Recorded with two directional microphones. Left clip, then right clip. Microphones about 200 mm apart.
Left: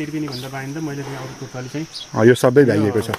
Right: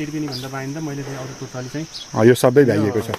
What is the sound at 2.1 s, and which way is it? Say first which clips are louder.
Speech: even; centre (ahead or behind).